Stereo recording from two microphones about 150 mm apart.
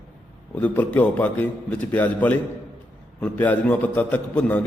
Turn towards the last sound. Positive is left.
turn(degrees=10)  # may be behind; listen again after turning